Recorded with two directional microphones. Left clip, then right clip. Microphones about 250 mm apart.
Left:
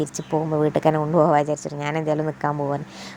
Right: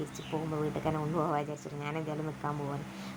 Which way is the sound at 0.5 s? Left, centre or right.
Left.